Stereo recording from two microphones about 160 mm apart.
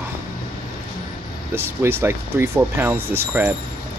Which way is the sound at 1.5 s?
15° right (ahead or behind).